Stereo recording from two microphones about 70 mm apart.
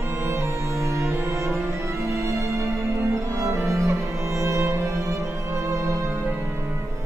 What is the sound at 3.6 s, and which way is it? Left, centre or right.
Music, right.